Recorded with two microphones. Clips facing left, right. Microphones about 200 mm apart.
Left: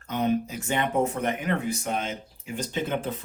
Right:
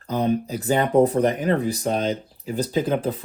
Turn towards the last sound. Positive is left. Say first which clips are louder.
# right 6 dB
turn(degrees=-35)  # may be behind; listen again after turning